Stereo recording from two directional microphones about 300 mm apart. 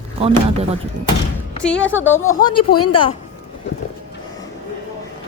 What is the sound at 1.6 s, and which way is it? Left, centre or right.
Speech, centre.